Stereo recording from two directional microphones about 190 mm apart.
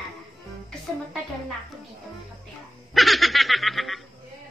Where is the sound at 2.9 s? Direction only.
Centre (ahead or behind).